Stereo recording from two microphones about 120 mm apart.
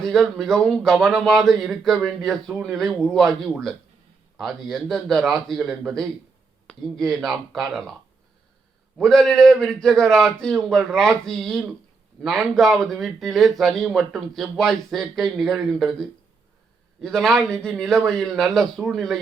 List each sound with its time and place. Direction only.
0.0 s speech: 5° left (ahead or behind)
9.0 s speech: 5° left (ahead or behind)